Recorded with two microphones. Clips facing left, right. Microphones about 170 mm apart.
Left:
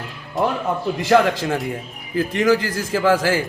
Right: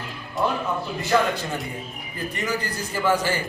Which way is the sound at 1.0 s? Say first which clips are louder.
Left 6 dB; 90° left.